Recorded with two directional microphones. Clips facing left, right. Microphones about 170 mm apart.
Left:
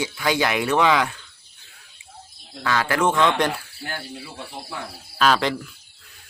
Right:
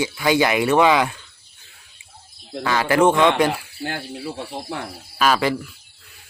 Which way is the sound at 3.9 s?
70° right (ahead or behind).